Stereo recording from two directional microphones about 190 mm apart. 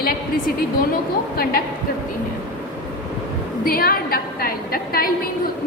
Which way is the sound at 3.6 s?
50° left (ahead or behind).